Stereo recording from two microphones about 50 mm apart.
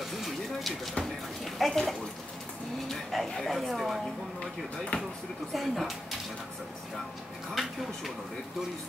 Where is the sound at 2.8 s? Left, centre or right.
Centre.